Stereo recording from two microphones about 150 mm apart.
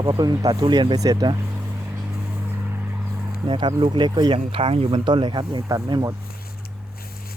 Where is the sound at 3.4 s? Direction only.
30° right (ahead or behind).